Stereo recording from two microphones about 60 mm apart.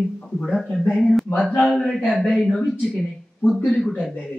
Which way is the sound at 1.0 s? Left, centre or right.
Centre.